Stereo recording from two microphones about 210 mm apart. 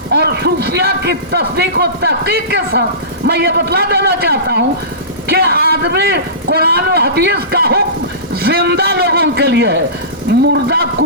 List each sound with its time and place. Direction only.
0.1 s a man's voice: 50° right (ahead or behind)